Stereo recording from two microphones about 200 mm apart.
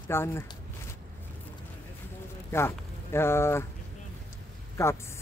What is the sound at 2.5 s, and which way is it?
Speech, 10° left (ahead or behind).